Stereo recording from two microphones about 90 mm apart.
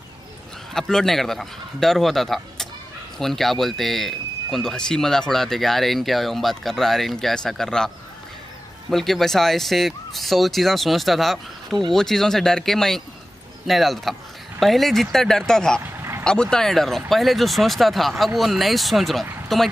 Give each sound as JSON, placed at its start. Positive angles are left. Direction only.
{"t": 0.7, "sound": "speech", "side_deg": 5}
{"t": 8.9, "sound": "speech", "side_deg": 5}
{"t": 15.8, "sound": "vehicle", "side_deg": -25}
{"t": 16.3, "sound": "speech", "side_deg": 10}